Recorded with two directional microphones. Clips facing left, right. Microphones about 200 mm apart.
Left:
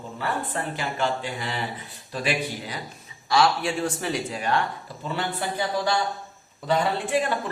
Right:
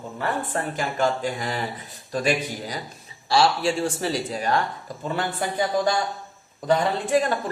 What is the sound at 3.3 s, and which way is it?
A man's voice, 30° right (ahead or behind).